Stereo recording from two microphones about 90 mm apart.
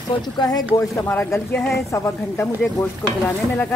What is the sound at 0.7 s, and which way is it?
Speech, 35° left (ahead or behind).